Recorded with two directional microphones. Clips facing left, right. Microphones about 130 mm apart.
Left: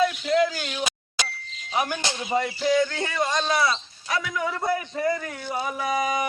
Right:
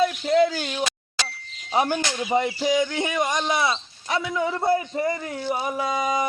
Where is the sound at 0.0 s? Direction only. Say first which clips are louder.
Right 2 dB; 30° right (ahead or behind).